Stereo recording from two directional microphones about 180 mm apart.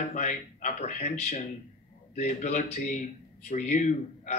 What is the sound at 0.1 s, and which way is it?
Speech, 45° left (ahead or behind).